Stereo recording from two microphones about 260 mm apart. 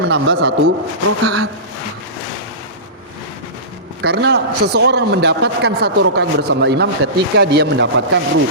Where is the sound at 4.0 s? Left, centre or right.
Right.